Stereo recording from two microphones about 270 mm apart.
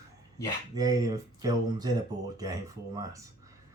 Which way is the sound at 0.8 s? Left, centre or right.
Centre.